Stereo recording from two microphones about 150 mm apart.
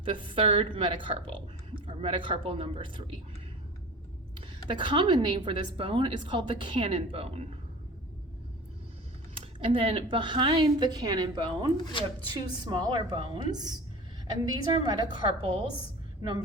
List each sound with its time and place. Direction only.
0.0 s a woman's voice: 35° right (ahead or behind)
4.7 s a woman's voice: 35° right (ahead or behind)
9.4 s a woman's voice: 35° right (ahead or behind)